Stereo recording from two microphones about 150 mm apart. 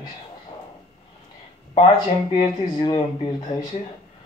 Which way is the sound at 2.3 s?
30° left (ahead or behind).